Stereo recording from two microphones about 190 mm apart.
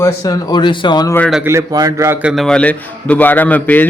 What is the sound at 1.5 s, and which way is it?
A man's voice, 15° right (ahead or behind).